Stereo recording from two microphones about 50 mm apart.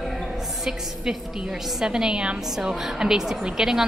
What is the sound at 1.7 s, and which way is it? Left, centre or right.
A woman's voice, centre.